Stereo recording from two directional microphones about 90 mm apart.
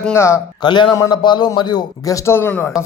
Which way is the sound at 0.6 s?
60° left (ahead or behind).